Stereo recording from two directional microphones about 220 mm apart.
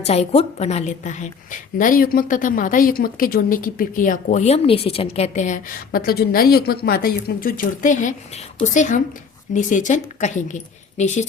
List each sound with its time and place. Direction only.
0.0 s a woman's voice: 30° left (ahead or behind)